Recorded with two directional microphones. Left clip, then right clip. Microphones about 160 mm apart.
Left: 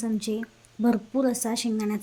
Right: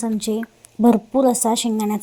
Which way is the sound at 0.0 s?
30° right (ahead or behind).